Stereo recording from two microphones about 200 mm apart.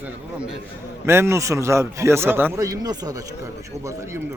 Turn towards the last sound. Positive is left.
turn(degrees=-20)  # may be behind; listen again after turning